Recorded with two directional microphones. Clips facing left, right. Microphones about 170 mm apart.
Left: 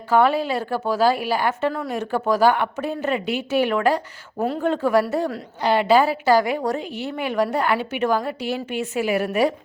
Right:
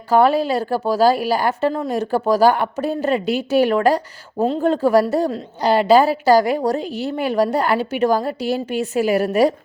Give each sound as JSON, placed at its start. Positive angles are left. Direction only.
{"t": 0.1, "sound": "a woman's voice", "side_deg": -40}
{"t": 4.4, "sound": "speech", "side_deg": -25}
{"t": 4.6, "sound": "a woman's voice", "side_deg": -35}